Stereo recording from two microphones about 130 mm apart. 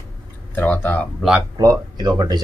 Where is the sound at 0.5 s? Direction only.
15° left (ahead or behind).